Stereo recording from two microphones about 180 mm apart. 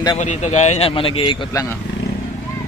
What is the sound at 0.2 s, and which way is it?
Speech, 40° left (ahead or behind).